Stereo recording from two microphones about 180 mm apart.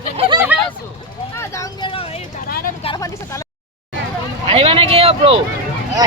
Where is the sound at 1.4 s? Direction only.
15° left (ahead or behind).